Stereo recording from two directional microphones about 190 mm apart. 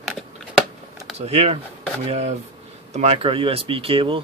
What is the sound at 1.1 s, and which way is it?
Speech, 35° right (ahead or behind).